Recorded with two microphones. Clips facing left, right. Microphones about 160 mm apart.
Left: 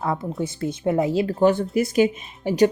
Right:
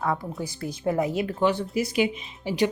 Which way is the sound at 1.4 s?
45° left (ahead or behind).